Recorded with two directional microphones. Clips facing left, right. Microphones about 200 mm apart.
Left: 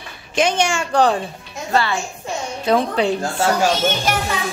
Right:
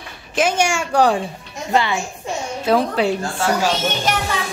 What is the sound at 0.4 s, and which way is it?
Speech, 10° right (ahead or behind).